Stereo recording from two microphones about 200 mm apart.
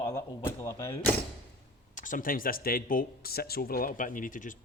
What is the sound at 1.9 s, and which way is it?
Speech, 40° left (ahead or behind).